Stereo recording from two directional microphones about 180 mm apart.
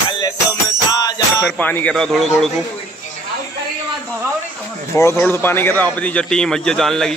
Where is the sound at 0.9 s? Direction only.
20° left (ahead or behind).